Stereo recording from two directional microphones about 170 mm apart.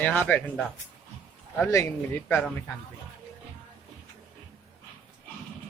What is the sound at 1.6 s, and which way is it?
Speech, 15° left (ahead or behind).